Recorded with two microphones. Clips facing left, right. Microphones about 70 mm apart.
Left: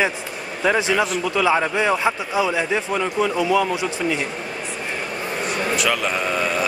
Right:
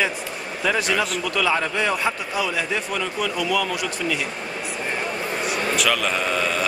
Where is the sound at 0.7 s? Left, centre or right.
Centre.